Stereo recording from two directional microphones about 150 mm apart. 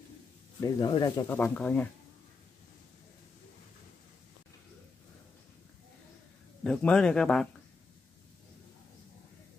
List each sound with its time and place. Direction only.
0.6 s speech: 25° left (ahead or behind)
1.3 s speech: 10° left (ahead or behind)
6.6 s speech: 5° left (ahead or behind)